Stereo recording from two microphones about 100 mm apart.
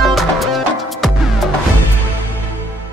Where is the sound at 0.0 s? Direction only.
Centre (ahead or behind).